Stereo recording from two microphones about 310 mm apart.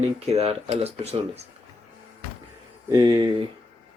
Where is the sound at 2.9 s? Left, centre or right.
Centre.